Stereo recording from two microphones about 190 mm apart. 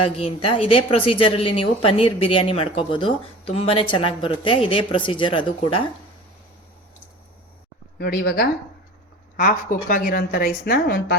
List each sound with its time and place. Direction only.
0.2 s a woman's voice: 30° left (ahead or behind)
7.9 s a woman's voice: 60° left (ahead or behind)